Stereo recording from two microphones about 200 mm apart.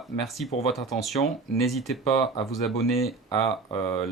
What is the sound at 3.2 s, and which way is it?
Speech, 25° left (ahead or behind).